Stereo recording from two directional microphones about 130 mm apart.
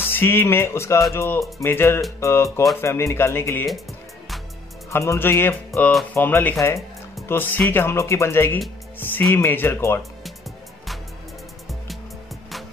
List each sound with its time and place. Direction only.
0.0 s speech: 15° left (ahead or behind)
4.9 s speech: 20° left (ahead or behind)
5.8 s speech: 5° left (ahead or behind)
6.1 s speech: 15° left (ahead or behind)
8.9 s music: 15° left (ahead or behind)
9.3 s speech: 15° left (ahead or behind)